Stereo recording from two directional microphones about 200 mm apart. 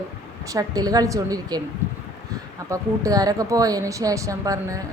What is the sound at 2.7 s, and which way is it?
A woman's voice, 15° right (ahead or behind).